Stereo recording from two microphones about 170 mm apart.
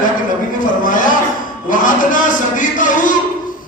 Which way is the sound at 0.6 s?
50° left (ahead or behind).